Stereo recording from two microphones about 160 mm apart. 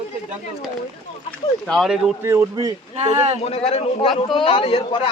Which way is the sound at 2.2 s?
15° right (ahead or behind).